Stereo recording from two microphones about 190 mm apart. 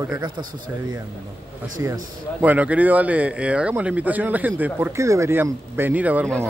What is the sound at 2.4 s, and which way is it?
Speech, 10° right (ahead or behind).